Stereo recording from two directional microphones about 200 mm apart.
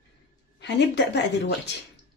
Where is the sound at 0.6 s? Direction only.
60° left (ahead or behind).